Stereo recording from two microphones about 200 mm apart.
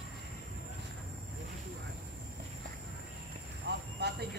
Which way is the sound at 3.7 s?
55° right (ahead or behind).